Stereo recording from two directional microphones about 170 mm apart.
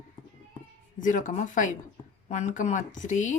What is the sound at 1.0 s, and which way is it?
Speech, 50° left (ahead or behind).